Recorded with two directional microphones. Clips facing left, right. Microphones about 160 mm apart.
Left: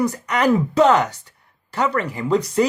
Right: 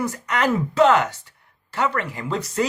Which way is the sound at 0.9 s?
35° left (ahead or behind).